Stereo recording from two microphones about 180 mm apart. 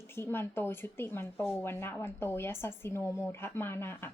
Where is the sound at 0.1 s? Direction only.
15° left (ahead or behind).